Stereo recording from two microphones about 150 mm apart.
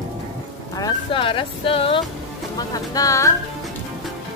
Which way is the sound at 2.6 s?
25° left (ahead or behind).